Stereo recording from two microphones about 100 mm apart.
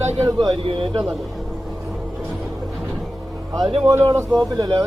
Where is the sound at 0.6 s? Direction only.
60° right (ahead or behind).